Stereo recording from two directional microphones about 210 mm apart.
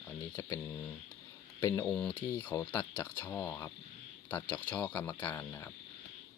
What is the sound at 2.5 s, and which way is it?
Speech, 15° left (ahead or behind).